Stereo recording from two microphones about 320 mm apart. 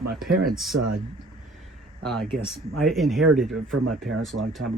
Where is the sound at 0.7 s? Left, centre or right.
Right.